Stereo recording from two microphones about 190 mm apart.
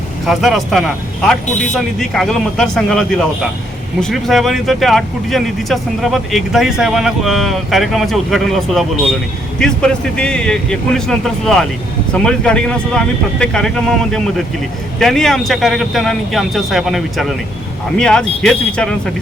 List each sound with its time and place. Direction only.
0.3 s speech: centre (ahead or behind)
1.5 s speech: 40° left (ahead or behind)
1.7 s speech: centre (ahead or behind)